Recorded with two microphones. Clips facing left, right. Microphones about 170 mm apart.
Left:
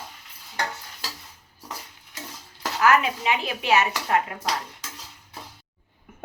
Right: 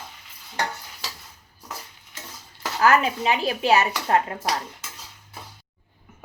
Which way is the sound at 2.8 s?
35° right (ahead or behind).